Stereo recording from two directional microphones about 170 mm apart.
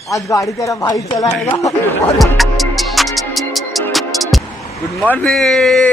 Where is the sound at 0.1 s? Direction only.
20° left (ahead or behind).